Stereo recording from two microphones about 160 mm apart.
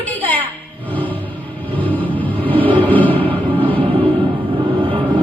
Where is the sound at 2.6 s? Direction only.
35° right (ahead or behind).